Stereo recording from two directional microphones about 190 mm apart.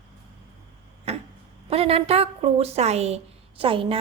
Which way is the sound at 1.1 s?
35° right (ahead or behind).